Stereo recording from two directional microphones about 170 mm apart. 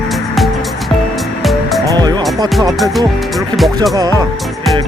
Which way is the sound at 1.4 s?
Centre (ahead or behind).